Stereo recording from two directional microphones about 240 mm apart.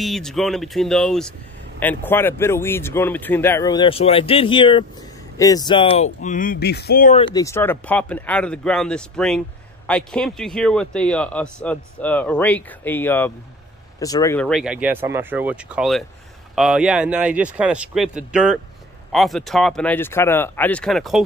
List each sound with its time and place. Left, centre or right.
0.0 s speech: centre; by 6.0 s left
6.2 s speech: left
7.2 s speech: centre